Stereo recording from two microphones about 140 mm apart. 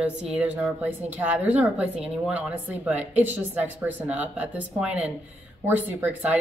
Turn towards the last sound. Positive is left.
turn(degrees=-10)  # may be behind; listen again after turning